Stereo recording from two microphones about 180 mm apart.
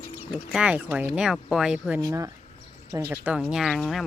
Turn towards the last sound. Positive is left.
turn(degrees=0)  # may be behind; listen again after turning